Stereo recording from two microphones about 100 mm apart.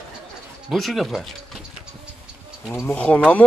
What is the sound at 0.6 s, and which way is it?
Speech, centre (ahead or behind).